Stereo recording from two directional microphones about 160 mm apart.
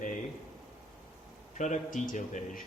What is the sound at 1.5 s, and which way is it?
A man's voice, 50° left (ahead or behind).